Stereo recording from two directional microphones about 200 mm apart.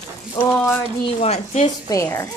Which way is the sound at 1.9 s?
15° left (ahead or behind).